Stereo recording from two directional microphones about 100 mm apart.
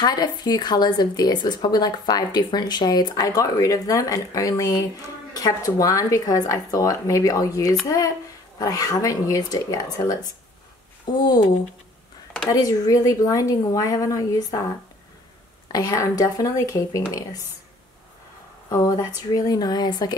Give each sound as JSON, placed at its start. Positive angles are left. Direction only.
{"t": 0.0, "sound": "speech", "side_deg": 45}
{"t": 12.4, "sound": "speech", "side_deg": 35}
{"t": 15.7, "sound": "speech", "side_deg": 40}
{"t": 18.7, "sound": "speech", "side_deg": 40}